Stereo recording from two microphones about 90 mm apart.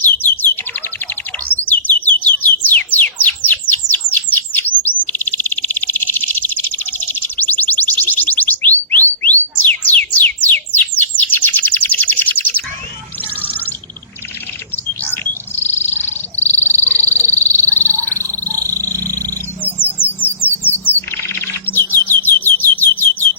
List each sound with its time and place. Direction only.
0.0 s bird: 20° left (ahead or behind)
9.6 s a sound: 20° left (ahead or behind)
10.2 s bird: 20° left (ahead or behind)
15.1 s bird: 25° left (ahead or behind)
16.8 s a sound: 30° right (ahead or behind)
20.1 s bird: 20° left (ahead or behind)